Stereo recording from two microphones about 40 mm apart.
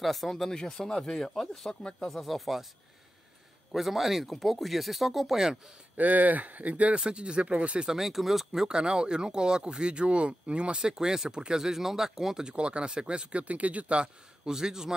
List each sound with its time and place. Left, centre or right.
0.0 s speech: centre
1.7 s speech: left
2.0 s speech: centre
3.7 s speech: centre
5.9 s speech: right
7.0 s speech: right
7.8 s speech: centre
8.6 s speech: right
12.4 s speech: right